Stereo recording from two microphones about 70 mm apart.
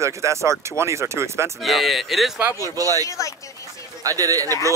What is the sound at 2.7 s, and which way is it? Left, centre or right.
Speech, right.